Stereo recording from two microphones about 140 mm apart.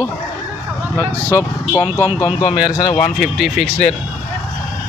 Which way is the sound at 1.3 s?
20° left (ahead or behind).